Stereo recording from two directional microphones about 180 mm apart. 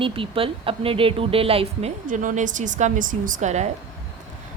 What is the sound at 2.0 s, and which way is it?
A woman's voice, 45° right (ahead or behind).